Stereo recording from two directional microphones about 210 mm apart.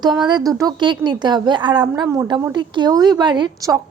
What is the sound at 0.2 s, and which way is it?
A woman's voice, 20° right (ahead or behind).